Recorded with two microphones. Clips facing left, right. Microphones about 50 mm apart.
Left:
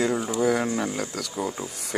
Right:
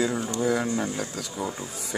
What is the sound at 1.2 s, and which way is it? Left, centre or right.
Speech, left.